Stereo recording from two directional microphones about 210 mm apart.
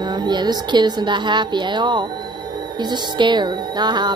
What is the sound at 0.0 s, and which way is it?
A woman's voice, 20° right (ahead or behind).